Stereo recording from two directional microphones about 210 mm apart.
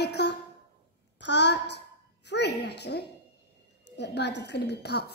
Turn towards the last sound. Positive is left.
turn(degrees=50)  # may be behind; listen again after turning